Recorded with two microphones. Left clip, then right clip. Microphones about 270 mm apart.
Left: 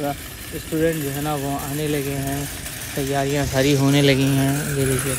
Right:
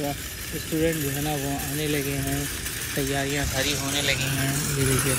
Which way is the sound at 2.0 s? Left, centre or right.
Left.